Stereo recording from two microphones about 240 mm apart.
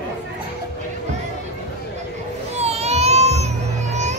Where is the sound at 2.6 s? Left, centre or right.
Right.